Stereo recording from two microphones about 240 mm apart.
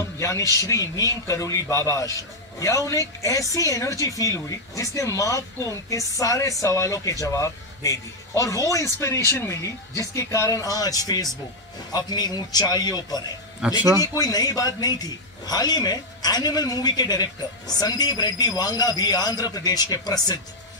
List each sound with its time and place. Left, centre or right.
0.2 s speech: centre
13.6 s speech: centre
14.0 s speech: centre